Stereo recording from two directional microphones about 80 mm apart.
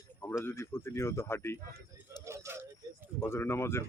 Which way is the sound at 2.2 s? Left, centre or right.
Right.